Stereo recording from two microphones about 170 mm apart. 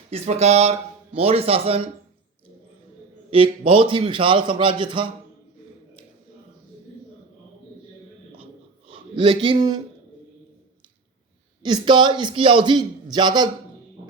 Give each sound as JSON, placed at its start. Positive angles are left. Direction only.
{"t": 0.1, "sound": "speech", "side_deg": -40}
{"t": 3.2, "sound": "a man's voice", "side_deg": -30}
{"t": 8.9, "sound": "a man's voice", "side_deg": -30}
{"t": 11.6, "sound": "a man's voice", "side_deg": -25}